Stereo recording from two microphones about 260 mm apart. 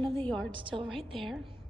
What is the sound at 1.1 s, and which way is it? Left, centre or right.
Speech, centre.